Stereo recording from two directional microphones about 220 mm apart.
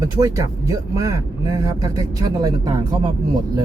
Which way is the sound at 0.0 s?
15° right (ahead or behind).